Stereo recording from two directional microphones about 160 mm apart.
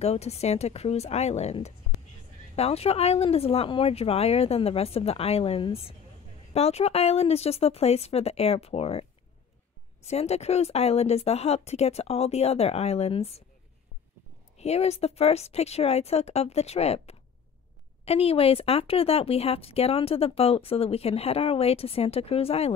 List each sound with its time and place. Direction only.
0.0 s speech: 40° left (ahead or behind)
10.0 s speech: 40° left (ahead or behind)
14.6 s speech: 40° left (ahead or behind)